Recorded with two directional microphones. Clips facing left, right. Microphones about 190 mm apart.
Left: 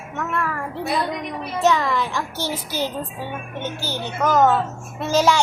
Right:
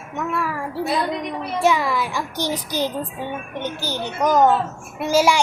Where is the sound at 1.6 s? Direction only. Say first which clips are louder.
Even; 10° right (ahead or behind).